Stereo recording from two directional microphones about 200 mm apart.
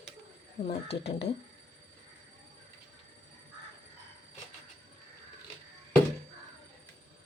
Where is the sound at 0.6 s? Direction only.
60° left (ahead or behind).